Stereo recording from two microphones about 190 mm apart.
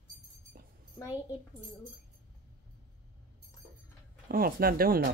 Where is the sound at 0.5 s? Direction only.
50° right (ahead or behind).